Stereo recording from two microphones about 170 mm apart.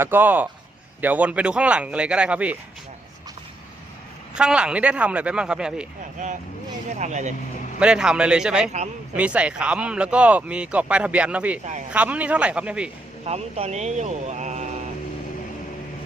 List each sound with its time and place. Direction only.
0.0 s speech: 10° right (ahead or behind)
4.4 s speech: 5° right (ahead or behind)
6.2 s speech: 45° right (ahead or behind)
7.8 s speech: 5° right (ahead or behind)
13.2 s speech: 40° right (ahead or behind)